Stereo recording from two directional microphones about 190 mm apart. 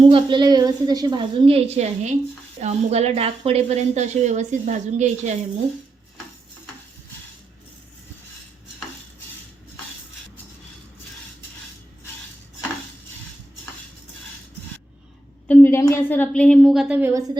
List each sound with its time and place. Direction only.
0.0 s a woman's voice: 25° right (ahead or behind)
15.4 s a woman's voice: 10° left (ahead or behind); by 17.3 s 15° right (ahead or behind)